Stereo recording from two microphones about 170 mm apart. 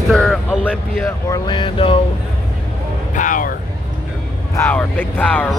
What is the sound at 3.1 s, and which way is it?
Speech, 50° left (ahead or behind).